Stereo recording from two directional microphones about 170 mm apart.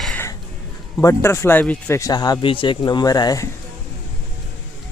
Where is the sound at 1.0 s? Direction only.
20° left (ahead or behind).